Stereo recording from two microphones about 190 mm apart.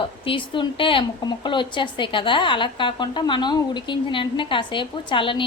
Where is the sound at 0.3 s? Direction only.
25° left (ahead or behind).